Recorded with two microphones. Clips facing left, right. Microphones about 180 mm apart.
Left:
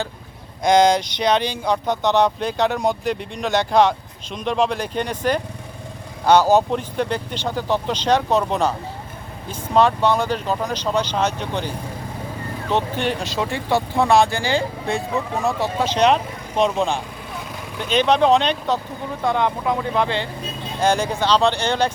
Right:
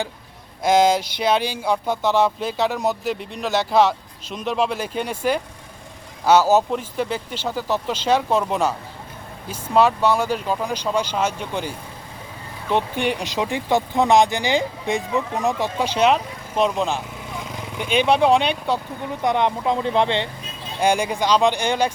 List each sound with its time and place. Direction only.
0.6 s speech: 5° right (ahead or behind)
12.7 s speech: 15° right (ahead or behind)
20.8 s speech: 15° right (ahead or behind)